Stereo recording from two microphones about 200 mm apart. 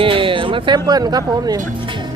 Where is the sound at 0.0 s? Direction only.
25° right (ahead or behind).